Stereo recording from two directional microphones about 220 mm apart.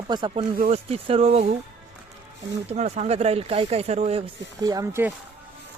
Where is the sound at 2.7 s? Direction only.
30° right (ahead or behind).